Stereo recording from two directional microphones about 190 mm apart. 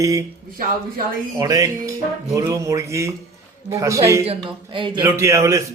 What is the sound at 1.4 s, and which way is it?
A man's voice, 20° right (ahead or behind).